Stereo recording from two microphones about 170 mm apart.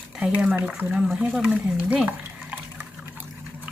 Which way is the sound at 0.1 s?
5° right (ahead or behind).